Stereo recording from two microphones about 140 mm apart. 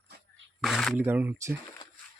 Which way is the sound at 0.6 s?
Centre (ahead or behind).